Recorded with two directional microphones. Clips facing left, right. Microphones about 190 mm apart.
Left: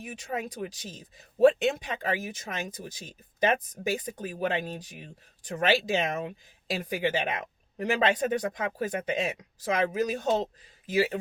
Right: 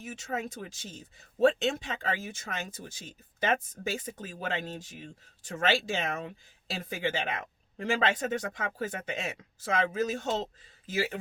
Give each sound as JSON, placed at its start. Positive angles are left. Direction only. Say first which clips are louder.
{"t": 0.0, "sound": "speech", "louder": "left 1 dB", "side_deg": 15}